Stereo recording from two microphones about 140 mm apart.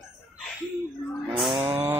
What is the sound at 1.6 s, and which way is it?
Chainsaw, 15° right (ahead or behind).